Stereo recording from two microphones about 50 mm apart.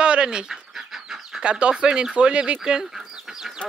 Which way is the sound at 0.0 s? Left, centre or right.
Centre.